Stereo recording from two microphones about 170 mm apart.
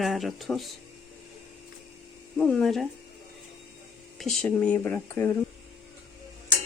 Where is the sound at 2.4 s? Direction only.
5° left (ahead or behind).